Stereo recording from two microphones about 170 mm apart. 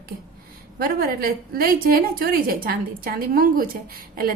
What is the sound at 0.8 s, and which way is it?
A woman's voice, 60° right (ahead or behind).